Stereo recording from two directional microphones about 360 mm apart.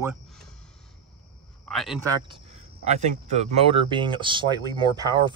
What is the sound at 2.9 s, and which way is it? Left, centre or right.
Speech, centre.